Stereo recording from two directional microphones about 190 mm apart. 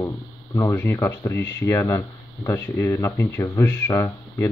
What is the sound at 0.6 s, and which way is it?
Speech, 10° left (ahead or behind).